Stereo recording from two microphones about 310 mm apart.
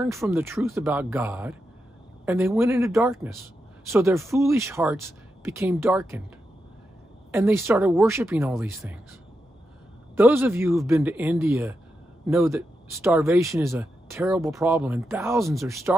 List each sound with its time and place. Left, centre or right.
0.0 s speech: centre
7.3 s speech: centre
10.1 s speech: centre